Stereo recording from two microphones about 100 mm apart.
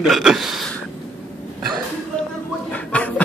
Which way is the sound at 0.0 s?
5° right (ahead or behind).